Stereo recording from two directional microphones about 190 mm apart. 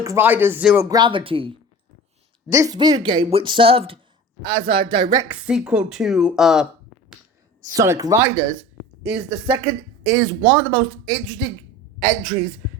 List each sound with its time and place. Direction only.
0.0 s speech: 15° right (ahead or behind)
0.9 s speech: 25° right (ahead or behind)
2.5 s speech: 20° right (ahead or behind)
5.3 s speech: 5° right (ahead or behind)
7.7 s a woman's voice: 15° right (ahead or behind); by 12.3 s centre (ahead or behind)